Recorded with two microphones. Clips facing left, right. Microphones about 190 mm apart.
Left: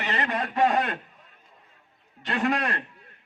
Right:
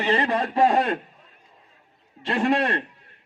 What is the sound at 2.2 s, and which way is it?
Speech, 30° right (ahead or behind).